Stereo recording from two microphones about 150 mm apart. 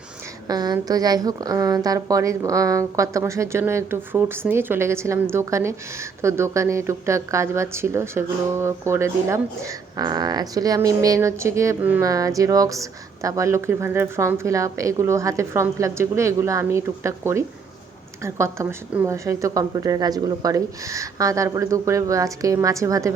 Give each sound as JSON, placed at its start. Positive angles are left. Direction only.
{"t": 0.4, "sound": "speech", "side_deg": -25}